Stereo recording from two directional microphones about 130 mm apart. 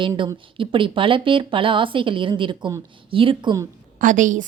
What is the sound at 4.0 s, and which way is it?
Speech, 90° right.